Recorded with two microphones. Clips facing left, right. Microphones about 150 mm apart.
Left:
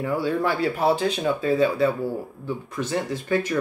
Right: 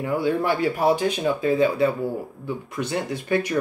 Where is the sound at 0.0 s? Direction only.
15° right (ahead or behind).